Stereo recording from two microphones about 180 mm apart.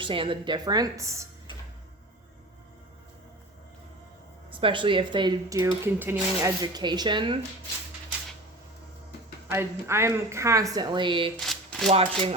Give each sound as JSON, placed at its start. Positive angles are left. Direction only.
{"t": 0.0, "sound": "speech", "side_deg": -30}
{"t": 4.6, "sound": "speech", "side_deg": -30}
{"t": 5.8, "sound": "speech", "side_deg": -15}
{"t": 9.5, "sound": "a woman's voice", "side_deg": -15}
{"t": 11.3, "sound": "shuffling cards", "side_deg": 0}
{"t": 11.9, "sound": "speech", "side_deg": -35}